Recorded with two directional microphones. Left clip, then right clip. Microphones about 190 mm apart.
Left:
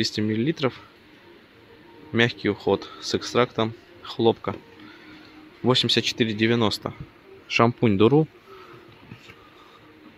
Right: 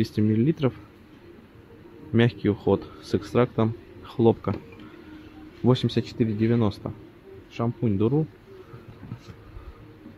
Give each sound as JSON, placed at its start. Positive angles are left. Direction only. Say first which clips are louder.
{"t": 0.0, "sound": "a man's voice", "louder": "even", "side_deg": -5}
{"t": 2.1, "sound": "a man's voice", "louder": "left 2 dB", "side_deg": -5}
{"t": 5.7, "sound": "speech", "louder": "left 4 dB", "side_deg": 0}
{"t": 7.4, "sound": "speech", "louder": "left 9 dB", "side_deg": 35}